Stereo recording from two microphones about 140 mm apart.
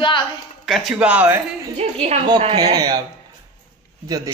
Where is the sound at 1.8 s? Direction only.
50° right (ahead or behind).